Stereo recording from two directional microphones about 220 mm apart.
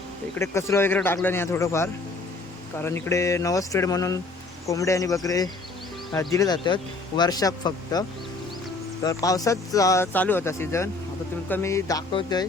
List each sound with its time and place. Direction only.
0.3 s speech: 10° left (ahead or behind)
9.0 s speech: 15° left (ahead or behind)